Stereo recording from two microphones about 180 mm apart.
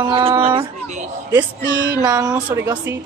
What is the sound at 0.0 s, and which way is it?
Speech, 30° right (ahead or behind).